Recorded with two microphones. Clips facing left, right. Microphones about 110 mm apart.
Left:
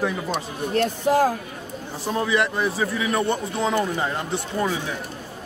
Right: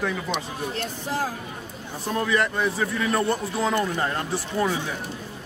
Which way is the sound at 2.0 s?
5° left (ahead or behind).